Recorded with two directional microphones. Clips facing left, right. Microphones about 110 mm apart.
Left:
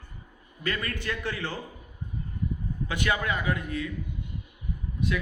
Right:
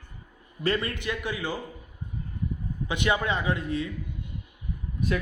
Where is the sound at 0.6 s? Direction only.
30° right (ahead or behind); by 1.5 s 15° right (ahead or behind).